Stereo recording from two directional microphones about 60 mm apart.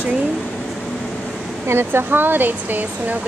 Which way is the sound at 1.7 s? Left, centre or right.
Right.